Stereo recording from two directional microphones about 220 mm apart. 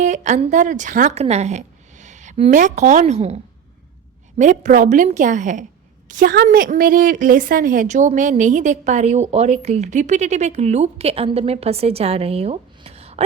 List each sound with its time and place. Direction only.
0.0 s a woman's voice: 35° right (ahead or behind)